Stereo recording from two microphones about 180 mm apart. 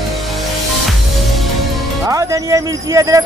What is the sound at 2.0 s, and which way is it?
Music, 15° right (ahead or behind).